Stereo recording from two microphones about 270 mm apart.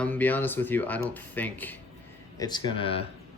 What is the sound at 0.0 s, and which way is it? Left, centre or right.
Speech, centre.